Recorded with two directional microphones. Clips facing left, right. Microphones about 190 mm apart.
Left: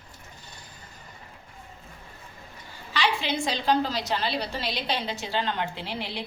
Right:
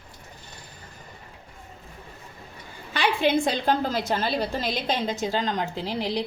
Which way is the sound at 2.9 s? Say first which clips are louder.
Right 5 dB; 55° right (ahead or behind).